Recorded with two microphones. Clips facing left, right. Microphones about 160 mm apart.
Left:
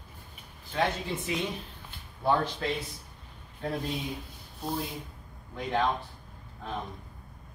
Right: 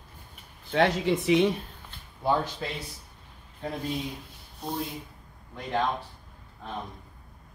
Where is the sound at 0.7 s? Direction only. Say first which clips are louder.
Right 6 dB; 85° right.